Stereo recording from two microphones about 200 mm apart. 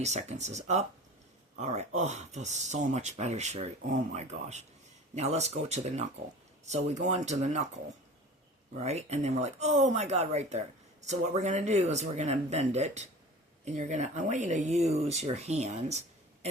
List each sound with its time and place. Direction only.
0.0 s speech: 35° right (ahead or behind)
8.8 s speech: 35° right (ahead or behind)